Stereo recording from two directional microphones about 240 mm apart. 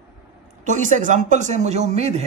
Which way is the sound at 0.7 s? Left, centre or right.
Right.